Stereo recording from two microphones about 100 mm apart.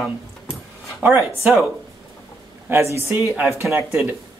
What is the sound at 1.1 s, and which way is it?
Speech, 30° right (ahead or behind).